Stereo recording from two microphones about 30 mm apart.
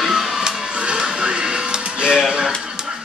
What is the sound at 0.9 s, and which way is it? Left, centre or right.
Music, right.